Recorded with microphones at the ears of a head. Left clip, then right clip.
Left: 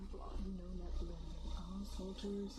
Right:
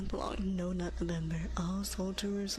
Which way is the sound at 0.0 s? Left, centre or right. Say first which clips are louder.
Right 14 dB; right.